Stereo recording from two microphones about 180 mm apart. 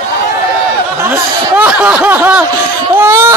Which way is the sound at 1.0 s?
10° right (ahead or behind).